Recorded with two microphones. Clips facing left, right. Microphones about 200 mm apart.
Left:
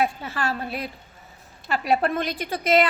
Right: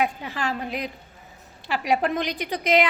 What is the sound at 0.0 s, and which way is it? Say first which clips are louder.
A woman's voice: left 1 dB; 15° right (ahead or behind).